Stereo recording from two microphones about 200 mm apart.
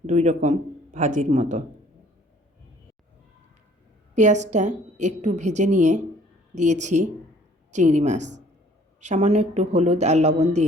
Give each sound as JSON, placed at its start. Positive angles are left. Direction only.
{"t": 0.0, "sound": "a woman's voice", "side_deg": -40}
{"t": 4.1, "sound": "a woman's voice", "side_deg": -35}